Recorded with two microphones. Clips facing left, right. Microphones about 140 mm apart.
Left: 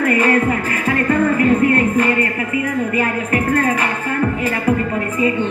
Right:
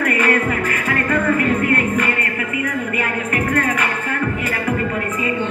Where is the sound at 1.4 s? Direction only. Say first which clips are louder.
Left 4 dB; 30° left (ahead or behind).